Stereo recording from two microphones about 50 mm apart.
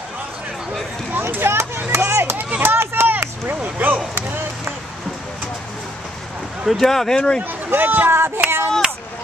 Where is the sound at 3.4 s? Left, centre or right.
Right.